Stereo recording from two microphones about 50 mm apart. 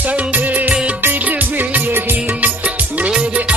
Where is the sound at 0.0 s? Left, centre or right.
Right.